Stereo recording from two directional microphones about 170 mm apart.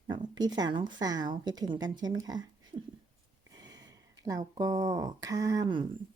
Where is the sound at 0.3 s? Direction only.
25° right (ahead or behind).